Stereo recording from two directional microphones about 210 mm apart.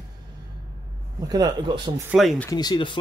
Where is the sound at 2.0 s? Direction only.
Centre (ahead or behind).